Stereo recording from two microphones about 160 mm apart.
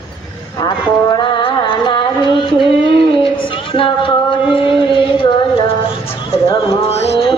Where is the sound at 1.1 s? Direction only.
30° left (ahead or behind).